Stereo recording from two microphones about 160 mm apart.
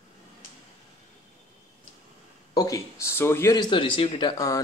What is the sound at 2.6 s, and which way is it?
Speech, 20° left (ahead or behind).